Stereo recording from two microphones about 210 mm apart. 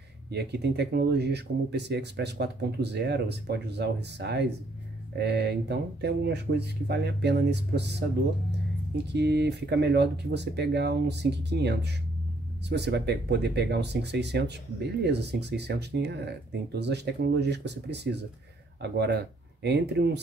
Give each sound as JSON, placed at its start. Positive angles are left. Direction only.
{"t": 0.3, "sound": "speech", "side_deg": -50}
{"t": 9.1, "sound": "speech", "side_deg": -55}